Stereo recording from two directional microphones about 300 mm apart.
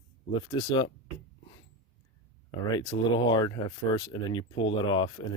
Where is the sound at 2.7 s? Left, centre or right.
Centre.